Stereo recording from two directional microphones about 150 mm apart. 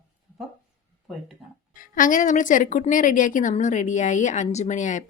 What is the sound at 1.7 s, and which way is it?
A woman's voice, 65° left (ahead or behind).